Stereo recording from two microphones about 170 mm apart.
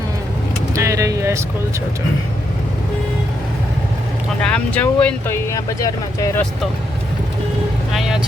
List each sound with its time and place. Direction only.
0.7 s a sound: 20° right (ahead or behind)
4.5 s speech: 10° left (ahead or behind)
7.9 s vehicle: 5° right (ahead or behind)